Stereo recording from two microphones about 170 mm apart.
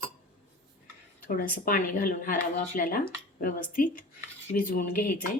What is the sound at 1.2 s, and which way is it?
A woman's voice, 55° left (ahead or behind).